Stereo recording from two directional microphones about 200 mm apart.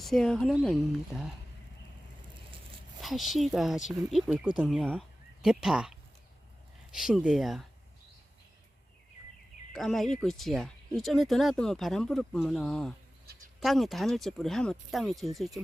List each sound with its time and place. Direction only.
0.0 s speech: centre (ahead or behind)
3.0 s speech: centre (ahead or behind)
9.7 s speech: centre (ahead or behind)